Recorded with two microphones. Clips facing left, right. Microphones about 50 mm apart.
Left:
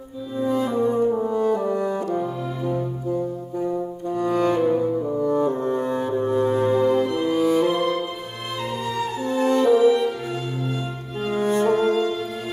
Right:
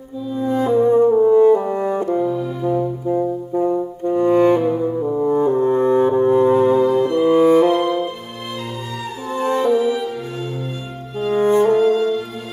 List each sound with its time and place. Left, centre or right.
0.7 s french horn: right
2.1 s music: centre
2.6 s music: centre
3.1 s music: right
4.6 s saxophone: centre
5.2 s brass instrument: right
6.8 s music: centre
7.2 s music: right
7.6 s music: centre
9.4 s music: right
9.7 s music: centre
11.3 s music: right
11.7 s music: centre